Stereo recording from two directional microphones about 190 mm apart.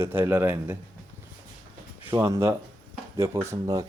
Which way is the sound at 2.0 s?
15° right (ahead or behind).